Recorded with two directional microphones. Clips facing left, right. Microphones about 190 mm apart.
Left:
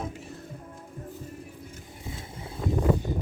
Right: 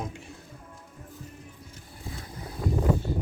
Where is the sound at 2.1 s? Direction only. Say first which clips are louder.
Even; 25° left (ahead or behind).